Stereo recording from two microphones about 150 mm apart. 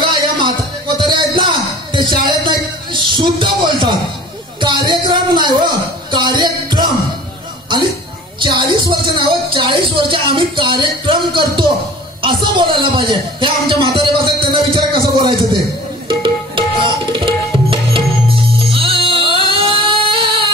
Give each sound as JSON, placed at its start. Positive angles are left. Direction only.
{"t": 0.1, "sound": "music", "side_deg": -30}
{"t": 8.4, "sound": "music", "side_deg": -30}
{"t": 16.1, "sound": "tabla", "side_deg": -35}
{"t": 18.6, "sound": "music", "side_deg": -40}